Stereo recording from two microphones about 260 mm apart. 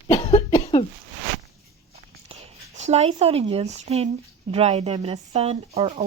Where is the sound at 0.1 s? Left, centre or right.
Centre.